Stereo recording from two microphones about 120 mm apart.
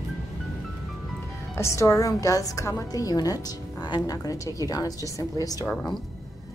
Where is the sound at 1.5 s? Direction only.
25° left (ahead or behind).